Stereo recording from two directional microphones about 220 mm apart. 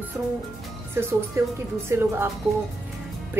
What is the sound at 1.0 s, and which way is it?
A woman's voice, 10° right (ahead or behind).